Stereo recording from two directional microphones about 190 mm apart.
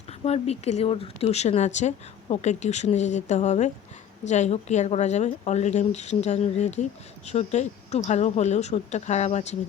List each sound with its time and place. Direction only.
0.3 s speech: 35° left (ahead or behind)